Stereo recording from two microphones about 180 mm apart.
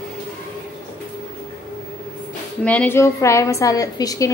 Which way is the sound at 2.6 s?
10° left (ahead or behind).